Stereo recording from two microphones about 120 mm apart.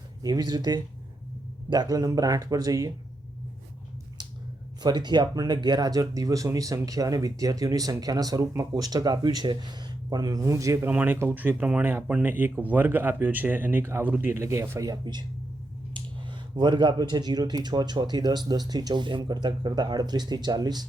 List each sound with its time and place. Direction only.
0.2 s speech: 35° right (ahead or behind)
4.8 s speech: 35° right (ahead or behind)
10.8 s speech: 15° right (ahead or behind); by 20.8 s 35° right (ahead or behind)